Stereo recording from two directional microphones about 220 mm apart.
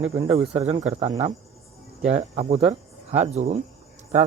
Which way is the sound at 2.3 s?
30° right (ahead or behind).